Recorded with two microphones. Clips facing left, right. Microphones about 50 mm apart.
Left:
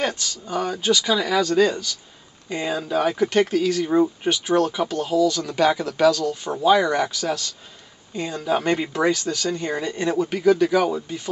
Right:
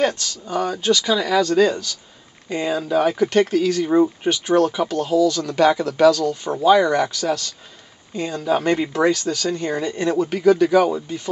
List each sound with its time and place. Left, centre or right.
0.0 s speech: centre